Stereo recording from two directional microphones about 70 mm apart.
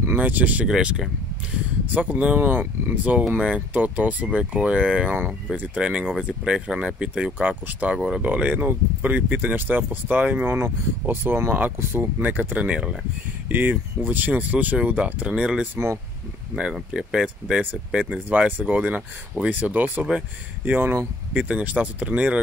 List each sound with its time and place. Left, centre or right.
0.2 s speech: right
0.7 s speech: centre
2.0 s speech: right
13.5 s speech: right
15.7 s speech: right
16.5 s speech: centre
18.3 s speech: right